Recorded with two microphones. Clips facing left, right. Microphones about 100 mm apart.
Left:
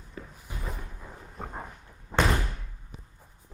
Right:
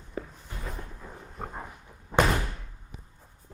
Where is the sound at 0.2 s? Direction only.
35° right (ahead or behind).